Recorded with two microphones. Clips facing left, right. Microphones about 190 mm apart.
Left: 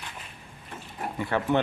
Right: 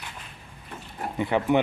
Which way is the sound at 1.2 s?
15° right (ahead or behind).